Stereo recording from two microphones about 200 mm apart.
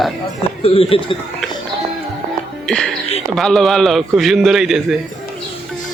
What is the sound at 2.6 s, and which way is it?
Speech, 5° left (ahead or behind).